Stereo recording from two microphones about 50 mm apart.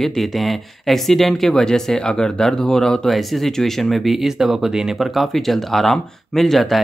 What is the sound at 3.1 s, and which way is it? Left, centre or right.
Speech, centre.